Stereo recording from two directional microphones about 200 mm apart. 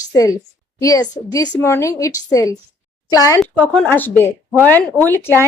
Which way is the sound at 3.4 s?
10° left (ahead or behind).